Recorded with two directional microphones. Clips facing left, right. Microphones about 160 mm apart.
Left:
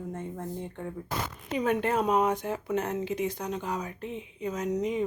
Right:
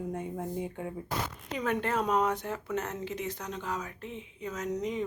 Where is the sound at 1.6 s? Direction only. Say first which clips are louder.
Left 4 dB; 15° left (ahead or behind).